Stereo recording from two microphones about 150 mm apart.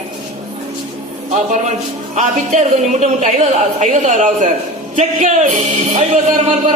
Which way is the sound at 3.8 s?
55° right (ahead or behind).